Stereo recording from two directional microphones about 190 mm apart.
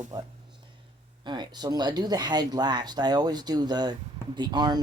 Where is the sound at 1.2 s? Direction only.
25° right (ahead or behind).